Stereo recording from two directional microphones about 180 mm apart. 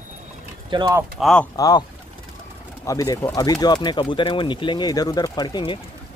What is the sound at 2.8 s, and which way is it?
Speech, 20° left (ahead or behind).